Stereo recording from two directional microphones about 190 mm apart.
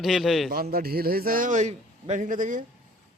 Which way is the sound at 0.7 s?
55° right (ahead or behind).